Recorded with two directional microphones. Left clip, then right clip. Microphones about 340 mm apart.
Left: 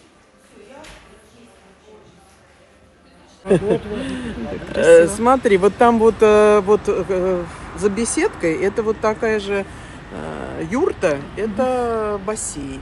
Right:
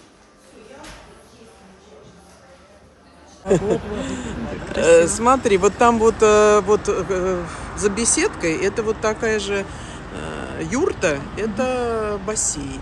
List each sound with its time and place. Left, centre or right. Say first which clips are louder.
3.4 s speech: left 2 dB; left